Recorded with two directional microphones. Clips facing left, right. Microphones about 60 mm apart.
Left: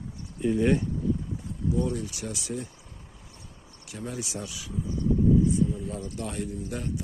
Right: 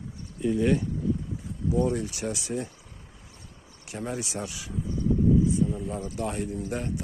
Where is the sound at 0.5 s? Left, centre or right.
Centre.